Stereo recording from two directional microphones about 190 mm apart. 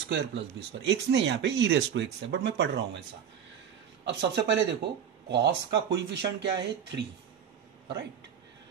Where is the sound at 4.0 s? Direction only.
65° right (ahead or behind).